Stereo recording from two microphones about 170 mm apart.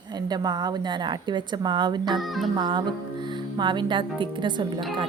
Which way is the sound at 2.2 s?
Centre (ahead or behind).